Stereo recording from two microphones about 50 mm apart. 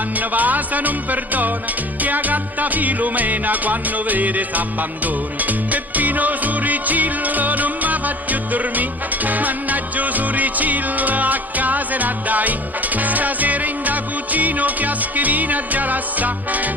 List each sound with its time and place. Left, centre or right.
0.2 s music: right